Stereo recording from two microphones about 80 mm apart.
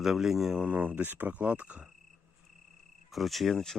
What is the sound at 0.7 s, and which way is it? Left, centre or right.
Speech, centre.